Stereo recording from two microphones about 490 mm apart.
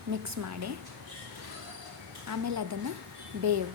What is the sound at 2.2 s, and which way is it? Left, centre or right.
Speech, right.